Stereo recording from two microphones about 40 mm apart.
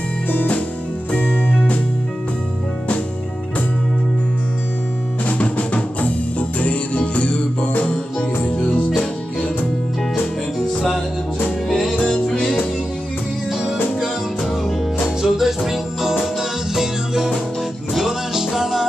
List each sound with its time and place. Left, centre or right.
0.3 s music: left
1.1 s music: left
5.4 s music: left
7.7 s music: left
8.5 s music: left
11.7 s music: centre
15.2 s music: centre